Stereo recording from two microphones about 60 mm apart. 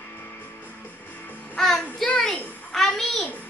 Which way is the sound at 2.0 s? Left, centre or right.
Centre.